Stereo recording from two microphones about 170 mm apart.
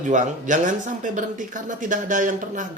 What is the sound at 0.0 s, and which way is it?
Speech, 50° right (ahead or behind).